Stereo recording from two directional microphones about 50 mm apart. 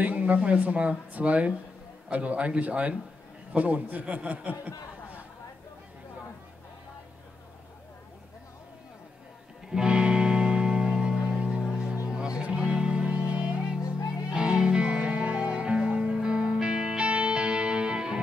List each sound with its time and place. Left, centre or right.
0.0 s speech: right
9.7 s music: centre